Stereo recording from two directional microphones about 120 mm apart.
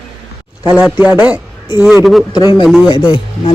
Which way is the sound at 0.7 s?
10° right (ahead or behind).